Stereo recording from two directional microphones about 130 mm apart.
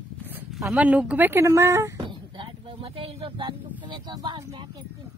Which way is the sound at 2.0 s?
40° right (ahead or behind).